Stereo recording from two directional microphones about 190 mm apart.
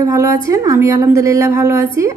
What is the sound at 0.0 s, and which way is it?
A woman's voice, 15° right (ahead or behind).